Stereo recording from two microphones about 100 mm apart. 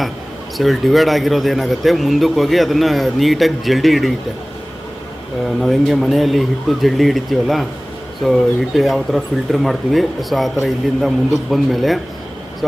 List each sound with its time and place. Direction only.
0.5 s speech: centre (ahead or behind)
5.6 s speech: centre (ahead or behind)